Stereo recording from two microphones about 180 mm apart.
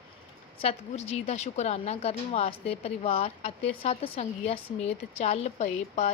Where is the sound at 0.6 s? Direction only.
35° left (ahead or behind).